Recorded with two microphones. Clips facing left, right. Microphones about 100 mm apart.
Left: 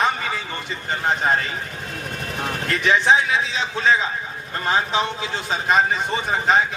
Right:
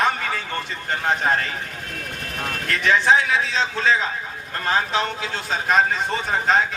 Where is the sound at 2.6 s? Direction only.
15° left (ahead or behind).